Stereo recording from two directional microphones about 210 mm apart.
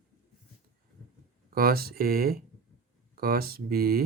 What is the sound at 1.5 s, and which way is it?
Speech, 45° right (ahead or behind).